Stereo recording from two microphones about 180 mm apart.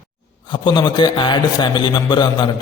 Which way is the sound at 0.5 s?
25° left (ahead or behind).